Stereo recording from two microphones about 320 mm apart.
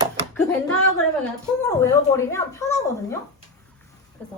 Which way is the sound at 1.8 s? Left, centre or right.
Centre.